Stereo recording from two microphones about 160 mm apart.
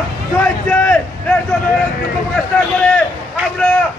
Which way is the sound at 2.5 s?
10° left (ahead or behind).